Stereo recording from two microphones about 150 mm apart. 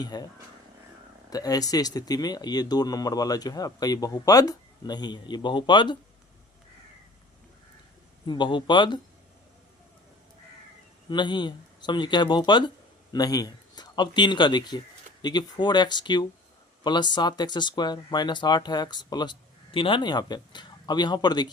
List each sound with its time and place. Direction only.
0.0 s speech: 25° left (ahead or behind)
1.3 s speech: 25° left (ahead or behind)
8.3 s speech: 30° left (ahead or behind)
11.1 s speech: 30° left (ahead or behind)